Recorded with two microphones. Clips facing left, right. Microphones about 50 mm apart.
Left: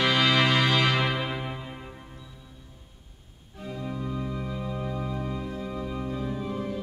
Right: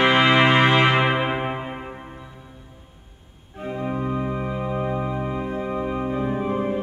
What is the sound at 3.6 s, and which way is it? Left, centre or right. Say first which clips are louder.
Organ: right 8 dB; right.